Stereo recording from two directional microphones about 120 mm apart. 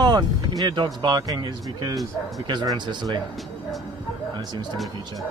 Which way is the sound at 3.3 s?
Centre (ahead or behind).